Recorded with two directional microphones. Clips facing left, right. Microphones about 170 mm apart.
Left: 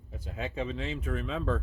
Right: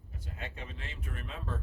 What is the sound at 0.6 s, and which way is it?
Speech, 90° left.